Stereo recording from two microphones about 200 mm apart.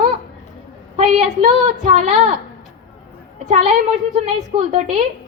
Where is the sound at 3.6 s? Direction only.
35° right (ahead or behind).